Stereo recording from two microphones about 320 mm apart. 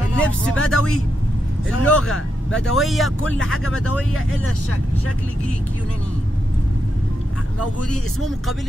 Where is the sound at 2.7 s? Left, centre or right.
Centre.